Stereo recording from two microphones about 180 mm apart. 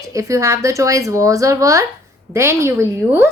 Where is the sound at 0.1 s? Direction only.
15° right (ahead or behind).